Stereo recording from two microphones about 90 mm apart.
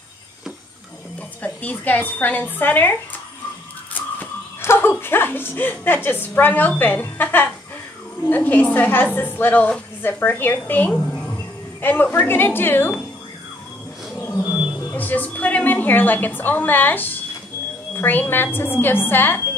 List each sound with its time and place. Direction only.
1.4 s a woman's voice: 20° left (ahead or behind)
4.6 s dog: 25° left (ahead or behind)
6.0 s a woman's voice: 25° left (ahead or behind)
10.9 s a woman's voice: 10° left (ahead or behind)
11.8 s a woman's voice: 20° left (ahead or behind)
14.6 s music: 10° right (ahead or behind)
15.0 s a woman's voice: 20° left (ahead or behind)